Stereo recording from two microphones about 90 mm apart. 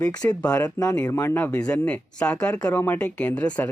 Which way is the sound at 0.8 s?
30° left (ahead or behind).